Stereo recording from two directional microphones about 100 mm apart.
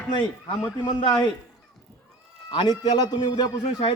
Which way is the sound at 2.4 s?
50° left (ahead or behind).